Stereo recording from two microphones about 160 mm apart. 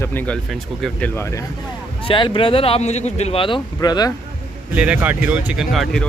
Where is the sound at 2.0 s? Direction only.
30° left (ahead or behind).